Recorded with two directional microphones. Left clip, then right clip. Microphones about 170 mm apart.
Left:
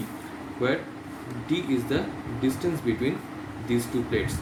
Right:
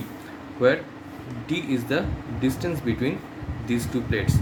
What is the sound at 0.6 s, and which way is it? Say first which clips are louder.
Speech: right 6 dB; 60° right (ahead or behind).